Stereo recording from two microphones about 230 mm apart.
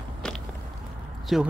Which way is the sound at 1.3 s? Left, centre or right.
Centre.